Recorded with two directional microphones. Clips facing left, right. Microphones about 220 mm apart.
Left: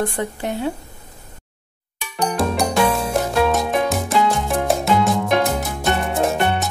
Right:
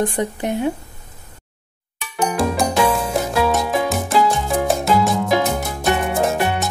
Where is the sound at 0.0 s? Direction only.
20° right (ahead or behind).